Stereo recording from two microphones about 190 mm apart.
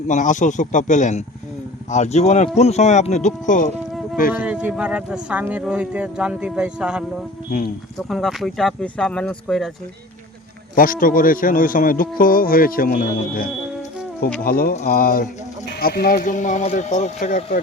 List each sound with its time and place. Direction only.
0.1 s speech: 40° left (ahead or behind)
4.4 s speech: 5° right (ahead or behind)
10.8 s speech: 45° left (ahead or behind)